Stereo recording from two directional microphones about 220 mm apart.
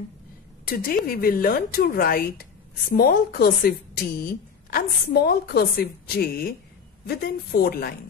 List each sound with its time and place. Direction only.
0.7 s speech: 40° left (ahead or behind)